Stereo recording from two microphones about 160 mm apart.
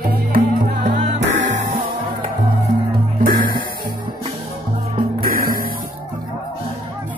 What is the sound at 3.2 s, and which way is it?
Music, 65° right (ahead or behind).